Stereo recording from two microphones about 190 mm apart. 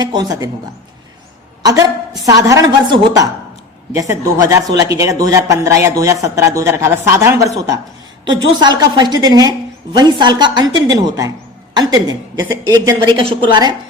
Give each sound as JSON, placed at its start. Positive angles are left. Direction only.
{"t": 0.0, "sound": "a woman's voice", "side_deg": -20}
{"t": 2.2, "sound": "a woman's voice", "side_deg": -15}